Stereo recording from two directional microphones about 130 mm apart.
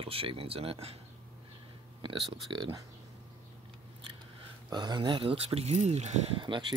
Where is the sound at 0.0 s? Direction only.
45° right (ahead or behind).